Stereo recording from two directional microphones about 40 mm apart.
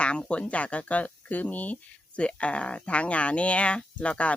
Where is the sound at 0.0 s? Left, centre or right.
Left.